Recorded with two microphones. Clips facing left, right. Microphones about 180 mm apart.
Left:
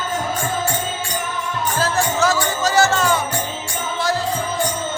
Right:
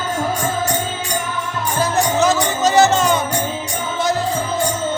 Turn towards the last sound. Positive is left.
turn(degrees=-20)  # may be behind; listen again after turning